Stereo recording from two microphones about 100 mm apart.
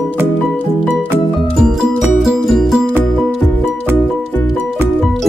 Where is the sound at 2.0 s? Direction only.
5° right (ahead or behind).